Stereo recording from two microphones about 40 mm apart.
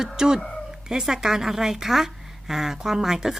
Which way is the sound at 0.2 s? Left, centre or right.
Centre.